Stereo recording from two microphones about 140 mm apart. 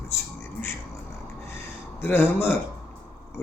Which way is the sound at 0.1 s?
20° left (ahead or behind).